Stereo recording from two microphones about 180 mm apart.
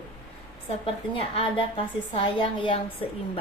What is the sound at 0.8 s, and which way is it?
A woman's voice, 30° left (ahead or behind).